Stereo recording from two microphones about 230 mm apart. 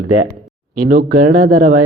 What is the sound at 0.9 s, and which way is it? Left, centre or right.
Speech, right.